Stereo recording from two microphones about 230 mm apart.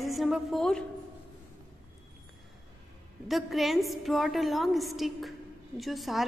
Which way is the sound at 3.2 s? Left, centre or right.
Centre.